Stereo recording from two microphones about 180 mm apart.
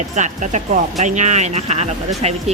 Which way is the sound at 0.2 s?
40° right (ahead or behind).